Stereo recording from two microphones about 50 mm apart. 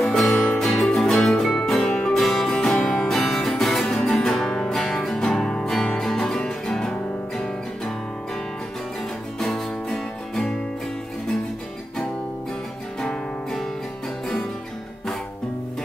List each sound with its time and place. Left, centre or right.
0.0 s music: centre
0.6 s music: centre
1.8 s music: centre
2.1 s music: centre
9.4 s music: centre
13.0 s music: centre